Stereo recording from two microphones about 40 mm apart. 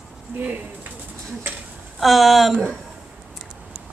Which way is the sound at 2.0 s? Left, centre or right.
Centre.